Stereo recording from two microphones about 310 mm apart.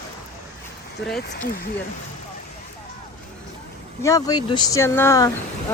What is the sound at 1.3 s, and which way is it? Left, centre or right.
Speech, left.